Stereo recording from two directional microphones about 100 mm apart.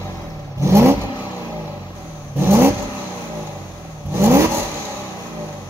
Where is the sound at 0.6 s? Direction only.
30° right (ahead or behind).